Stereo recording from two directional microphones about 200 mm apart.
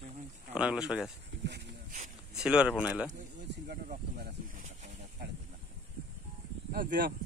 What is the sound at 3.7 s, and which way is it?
Speech, 50° right (ahead or behind).